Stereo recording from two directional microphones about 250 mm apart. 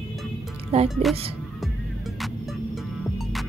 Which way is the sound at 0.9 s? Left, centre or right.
Centre.